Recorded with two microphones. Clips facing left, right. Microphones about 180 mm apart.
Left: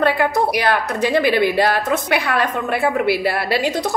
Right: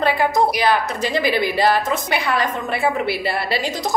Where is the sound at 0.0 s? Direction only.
60° left (ahead or behind).